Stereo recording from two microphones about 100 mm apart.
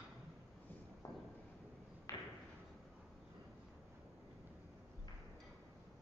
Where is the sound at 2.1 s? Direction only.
30° left (ahead or behind).